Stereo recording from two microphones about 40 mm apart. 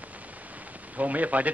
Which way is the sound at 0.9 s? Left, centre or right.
Right.